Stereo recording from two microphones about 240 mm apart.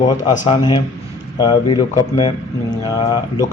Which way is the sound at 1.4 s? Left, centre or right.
Centre.